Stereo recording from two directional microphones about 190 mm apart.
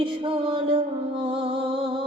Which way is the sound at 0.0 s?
25° right (ahead or behind).